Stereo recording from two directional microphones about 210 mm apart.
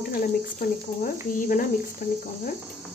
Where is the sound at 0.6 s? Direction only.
40° left (ahead or behind).